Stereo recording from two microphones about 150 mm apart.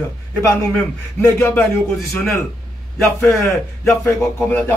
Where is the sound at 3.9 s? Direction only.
15° left (ahead or behind).